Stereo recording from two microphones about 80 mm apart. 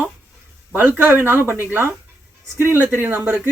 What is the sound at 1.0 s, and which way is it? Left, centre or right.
Speech, right.